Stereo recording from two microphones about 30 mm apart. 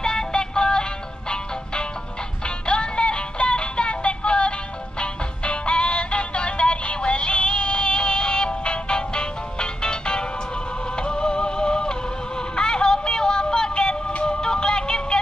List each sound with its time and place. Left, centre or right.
0.0 s music: left
2.4 s music: left